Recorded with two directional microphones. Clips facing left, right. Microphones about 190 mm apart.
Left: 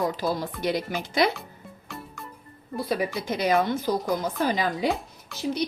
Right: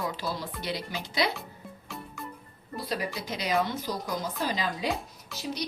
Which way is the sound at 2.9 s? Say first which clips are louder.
Left 6 dB; 55° left (ahead or behind).